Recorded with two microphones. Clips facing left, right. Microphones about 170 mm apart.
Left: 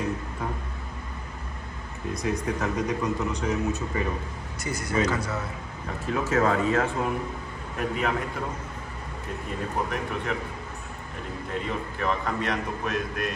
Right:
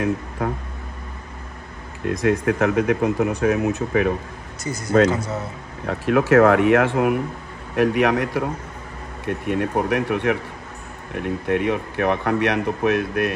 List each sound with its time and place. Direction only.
2.0 s speech: 90° right; by 4.1 s 75° right (ahead or behind)
4.7 s speech: 30° right (ahead or behind)
5.9 s speech: 80° right; by 13.3 s 65° right (ahead or behind)